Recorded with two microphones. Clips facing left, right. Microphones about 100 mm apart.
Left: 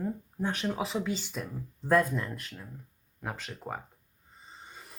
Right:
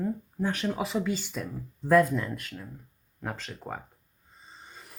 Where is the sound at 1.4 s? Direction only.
15° left (ahead or behind).